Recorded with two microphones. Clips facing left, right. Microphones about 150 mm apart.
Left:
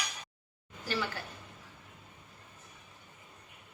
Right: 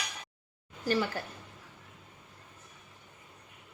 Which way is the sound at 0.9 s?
45° right (ahead or behind).